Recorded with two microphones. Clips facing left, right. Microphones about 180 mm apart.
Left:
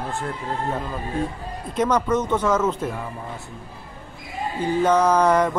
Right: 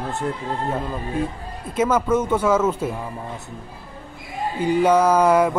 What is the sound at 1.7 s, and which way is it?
Speech, 5° right (ahead or behind).